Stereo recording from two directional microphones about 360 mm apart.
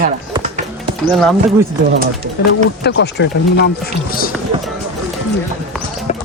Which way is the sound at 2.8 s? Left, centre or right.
Left.